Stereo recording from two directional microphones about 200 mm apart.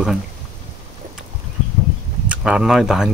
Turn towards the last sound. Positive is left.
turn(degrees=0)  # may be behind; listen again after turning